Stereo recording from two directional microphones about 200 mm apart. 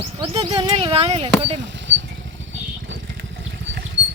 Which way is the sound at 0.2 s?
30° right (ahead or behind).